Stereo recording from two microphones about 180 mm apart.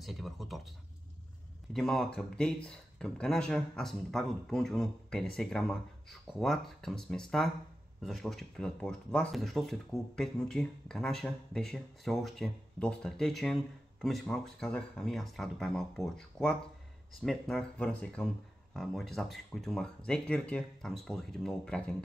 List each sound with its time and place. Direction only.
0.0 s speech: centre (ahead or behind)